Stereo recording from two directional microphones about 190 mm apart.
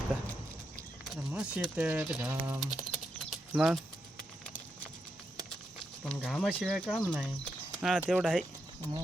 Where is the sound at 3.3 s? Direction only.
Centre (ahead or behind).